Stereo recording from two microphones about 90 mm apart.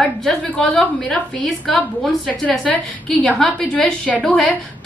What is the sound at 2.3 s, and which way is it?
A woman's voice, 15° left (ahead or behind).